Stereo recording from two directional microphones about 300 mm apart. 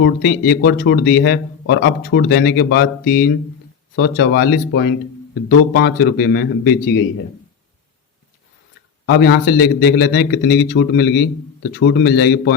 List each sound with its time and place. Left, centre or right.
0.0 s speech: left
3.0 s speech: left
3.9 s speech: left
9.0 s speech: left